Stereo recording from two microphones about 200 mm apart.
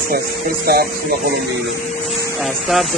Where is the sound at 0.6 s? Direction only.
50° right (ahead or behind).